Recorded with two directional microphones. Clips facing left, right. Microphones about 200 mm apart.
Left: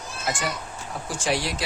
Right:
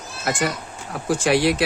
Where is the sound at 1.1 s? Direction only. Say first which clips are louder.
Right 9 dB; 60° right (ahead or behind).